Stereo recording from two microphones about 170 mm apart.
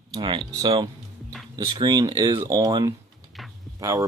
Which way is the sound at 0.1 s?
30° right (ahead or behind).